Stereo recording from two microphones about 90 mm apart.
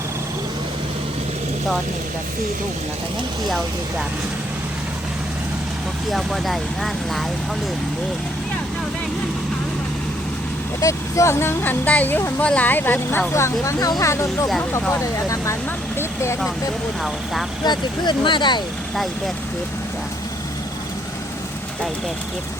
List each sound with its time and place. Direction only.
6.1 s speech: centre (ahead or behind)
10.8 s speech: 35° left (ahead or behind)
14.6 s speech: 25° left (ahead or behind)
16.0 s vehicle: 30° left (ahead or behind)
17.6 s speech: 55° left (ahead or behind)